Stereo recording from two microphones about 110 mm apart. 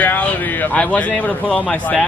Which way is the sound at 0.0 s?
15° left (ahead or behind).